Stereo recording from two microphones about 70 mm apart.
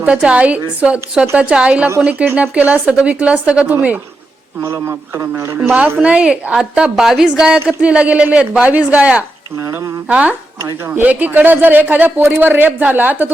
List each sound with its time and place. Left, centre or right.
0.0 s a man's voice: centre
4.6 s a man's voice: right
6.0 s a man's voice: centre
9.6 s speech: right
10.1 s speech: centre